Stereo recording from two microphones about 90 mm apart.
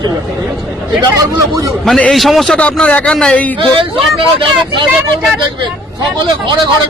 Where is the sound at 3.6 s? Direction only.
80° right.